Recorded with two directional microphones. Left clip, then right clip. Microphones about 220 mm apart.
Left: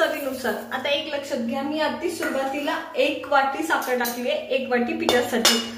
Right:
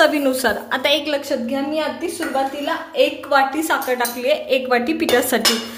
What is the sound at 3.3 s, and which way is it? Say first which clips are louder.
A woman's voice: right 3 dB; 45° right (ahead or behind).